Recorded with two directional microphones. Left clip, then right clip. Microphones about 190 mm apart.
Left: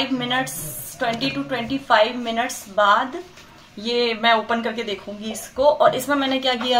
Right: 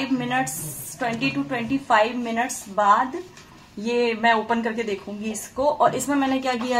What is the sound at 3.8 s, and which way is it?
Speech, centre (ahead or behind).